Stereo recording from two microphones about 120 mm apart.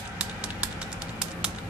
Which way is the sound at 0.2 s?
10° right (ahead or behind).